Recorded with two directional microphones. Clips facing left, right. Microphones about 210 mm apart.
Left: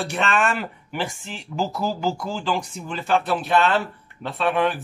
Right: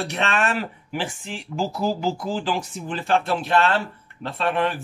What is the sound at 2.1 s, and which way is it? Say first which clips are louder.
Speech: right 1 dB; 35° right (ahead or behind).